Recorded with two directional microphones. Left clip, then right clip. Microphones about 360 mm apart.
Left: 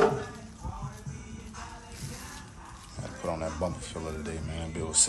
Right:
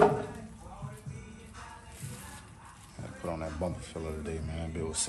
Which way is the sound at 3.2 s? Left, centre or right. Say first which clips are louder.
Left 4 dB; centre.